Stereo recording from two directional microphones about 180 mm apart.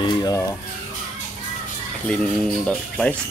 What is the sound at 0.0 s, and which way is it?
Music, 25° left (ahead or behind).